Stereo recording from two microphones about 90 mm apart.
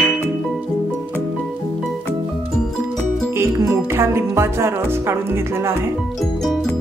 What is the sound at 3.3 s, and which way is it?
Music, 30° right (ahead or behind).